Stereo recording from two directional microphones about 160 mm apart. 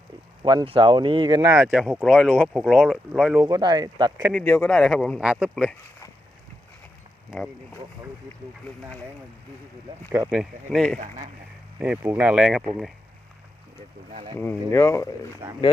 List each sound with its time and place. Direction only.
0.4 s speech: 30° right (ahead or behind)
1.4 s speech: 15° right (ahead or behind)
1.6 s speech: 5° right (ahead or behind)
3.4 s speech: 25° right (ahead or behind)
4.3 s speech: 5° left (ahead or behind)
7.3 s speech: centre (ahead or behind)
10.1 s speech: 15° right (ahead or behind)
10.3 s speech: centre (ahead or behind)
10.9 s speech: 50° right (ahead or behind)
11.8 s speech: 10° right (ahead or behind)
14.3 s speech: 15° left (ahead or behind)